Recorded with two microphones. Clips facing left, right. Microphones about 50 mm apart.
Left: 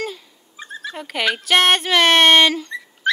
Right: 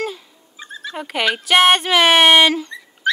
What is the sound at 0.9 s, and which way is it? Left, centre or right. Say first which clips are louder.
Speech: right 2 dB; centre.